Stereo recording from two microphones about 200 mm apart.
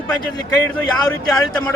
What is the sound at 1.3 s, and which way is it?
Speech, 5° left (ahead or behind).